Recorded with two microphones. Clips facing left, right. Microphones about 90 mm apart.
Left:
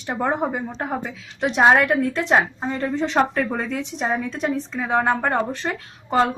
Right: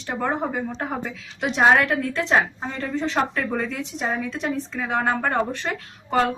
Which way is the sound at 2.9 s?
30° left (ahead or behind).